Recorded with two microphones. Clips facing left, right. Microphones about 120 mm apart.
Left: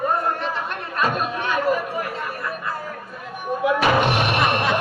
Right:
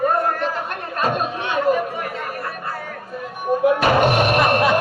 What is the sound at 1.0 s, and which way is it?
Chatter, 35° right (ahead or behind).